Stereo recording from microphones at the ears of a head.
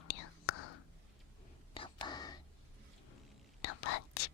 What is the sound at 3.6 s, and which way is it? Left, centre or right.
Whispering, left.